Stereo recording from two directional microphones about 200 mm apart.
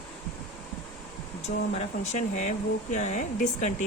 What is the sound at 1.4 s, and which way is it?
Speech, 35° left (ahead or behind).